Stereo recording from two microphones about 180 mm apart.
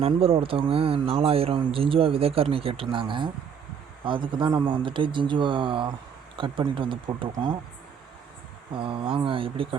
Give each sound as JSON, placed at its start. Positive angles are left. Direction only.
{"t": 0.0, "sound": "speech", "side_deg": -30}
{"t": 8.7, "sound": "speech", "side_deg": -30}